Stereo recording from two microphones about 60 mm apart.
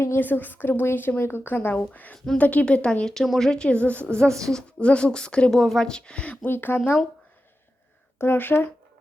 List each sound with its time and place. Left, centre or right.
0.2 s a woman's voice: left
2.1 s a woman's voice: centre
2.4 s a woman's voice: left
4.0 s a woman's voice: centre
6.4 s a woman's voice: left
8.2 s a woman's voice: left